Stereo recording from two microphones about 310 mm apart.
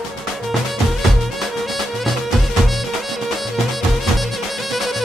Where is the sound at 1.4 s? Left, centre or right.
Centre.